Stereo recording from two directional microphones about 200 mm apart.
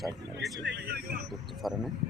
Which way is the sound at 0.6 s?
55° right (ahead or behind).